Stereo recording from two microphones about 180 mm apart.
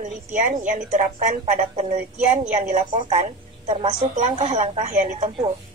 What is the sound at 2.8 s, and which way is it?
A woman's voice, 25° right (ahead or behind).